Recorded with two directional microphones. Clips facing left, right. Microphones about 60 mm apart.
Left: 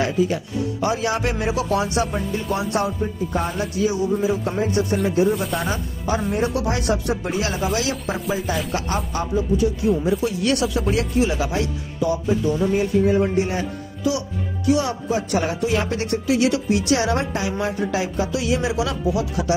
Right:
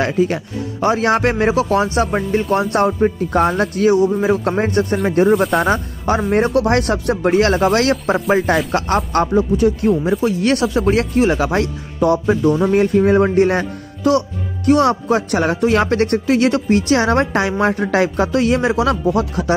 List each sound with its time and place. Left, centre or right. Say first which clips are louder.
0.0 s speech: right 4 dB; right
10.2 s speech: right 5 dB; right